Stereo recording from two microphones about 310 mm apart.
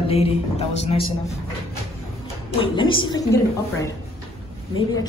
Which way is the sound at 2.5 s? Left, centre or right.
Centre.